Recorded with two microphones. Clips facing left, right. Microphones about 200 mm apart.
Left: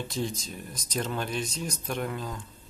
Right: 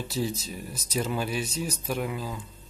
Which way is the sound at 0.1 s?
5° right (ahead or behind).